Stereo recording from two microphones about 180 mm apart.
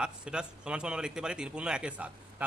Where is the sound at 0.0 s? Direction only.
5° right (ahead or behind).